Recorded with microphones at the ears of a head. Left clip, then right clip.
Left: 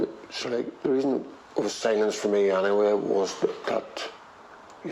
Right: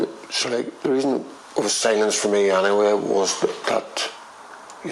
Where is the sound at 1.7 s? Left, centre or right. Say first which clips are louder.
Right 5 dB; right.